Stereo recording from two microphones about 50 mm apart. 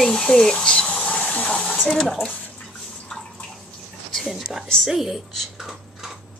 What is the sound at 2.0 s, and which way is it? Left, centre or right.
Speech, centre.